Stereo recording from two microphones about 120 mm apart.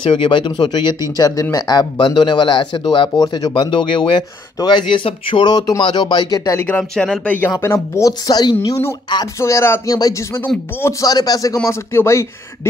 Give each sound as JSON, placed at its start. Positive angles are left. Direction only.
{"t": 0.0, "sound": "speech", "side_deg": 45}
{"t": 3.2, "sound": "speech", "side_deg": 30}
{"t": 6.8, "sound": "speech", "side_deg": 5}
{"t": 7.5, "sound": "speech", "side_deg": 20}
{"t": 8.3, "sound": "speech", "side_deg": 35}
{"t": 9.4, "sound": "speech", "side_deg": 20}